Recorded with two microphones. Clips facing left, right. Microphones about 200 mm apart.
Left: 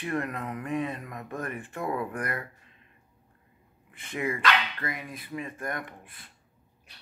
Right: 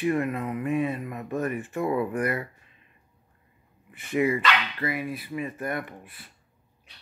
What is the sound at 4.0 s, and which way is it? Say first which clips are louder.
Speech: right 8 dB; 10° right (ahead or behind).